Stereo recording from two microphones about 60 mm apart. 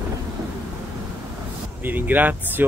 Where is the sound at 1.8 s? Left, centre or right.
Right.